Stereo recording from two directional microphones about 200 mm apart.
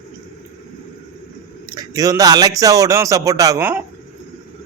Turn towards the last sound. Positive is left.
turn(degrees=-15)  # may be behind; listen again after turning